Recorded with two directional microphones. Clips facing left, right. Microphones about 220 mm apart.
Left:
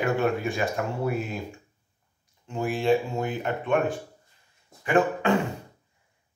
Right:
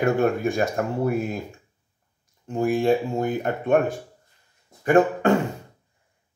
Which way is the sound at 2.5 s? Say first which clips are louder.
Right 3 dB; 45° right (ahead or behind).